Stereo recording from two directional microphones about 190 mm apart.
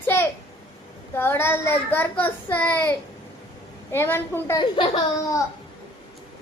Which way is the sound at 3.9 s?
15° left (ahead or behind).